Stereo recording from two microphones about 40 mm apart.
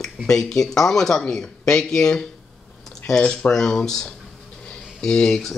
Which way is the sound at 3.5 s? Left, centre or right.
Centre.